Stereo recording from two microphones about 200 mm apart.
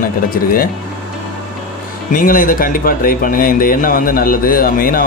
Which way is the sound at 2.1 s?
45° left (ahead or behind).